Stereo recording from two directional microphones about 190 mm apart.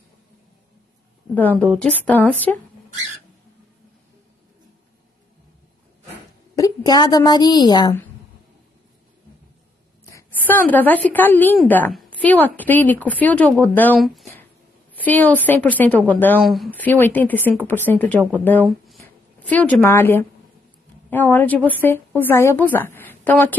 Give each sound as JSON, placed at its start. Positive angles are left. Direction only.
{"t": 1.3, "sound": "a woman's voice", "side_deg": 10}
{"t": 6.5, "sound": "a woman's voice", "side_deg": 20}
{"t": 10.1, "sound": "a woman's voice", "side_deg": 10}
{"t": 16.3, "sound": "a woman's voice", "side_deg": 0}